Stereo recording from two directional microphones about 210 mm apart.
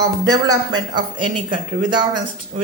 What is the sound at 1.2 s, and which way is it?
Speech, 90° right.